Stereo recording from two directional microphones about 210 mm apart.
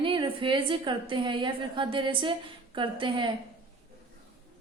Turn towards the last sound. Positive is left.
turn(degrees=-20)  # may be behind; listen again after turning